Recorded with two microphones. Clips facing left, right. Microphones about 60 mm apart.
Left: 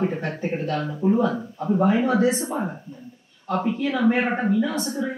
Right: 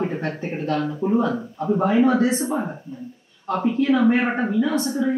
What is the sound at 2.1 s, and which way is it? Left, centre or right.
Speech, right.